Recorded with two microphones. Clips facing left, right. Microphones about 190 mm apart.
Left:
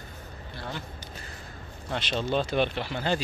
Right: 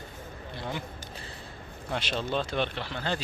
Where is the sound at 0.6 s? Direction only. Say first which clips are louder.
Right 2 dB; 15° right (ahead or behind).